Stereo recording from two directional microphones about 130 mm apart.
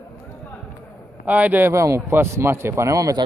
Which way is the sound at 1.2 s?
10° right (ahead or behind).